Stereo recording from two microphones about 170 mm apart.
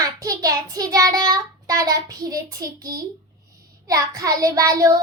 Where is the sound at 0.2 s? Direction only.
20° right (ahead or behind).